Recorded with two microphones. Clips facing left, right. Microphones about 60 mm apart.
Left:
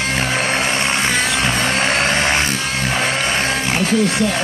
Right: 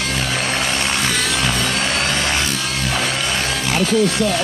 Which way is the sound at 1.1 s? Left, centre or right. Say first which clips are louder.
Left 2 dB; left.